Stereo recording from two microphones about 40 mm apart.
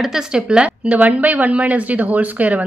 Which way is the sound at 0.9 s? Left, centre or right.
Right.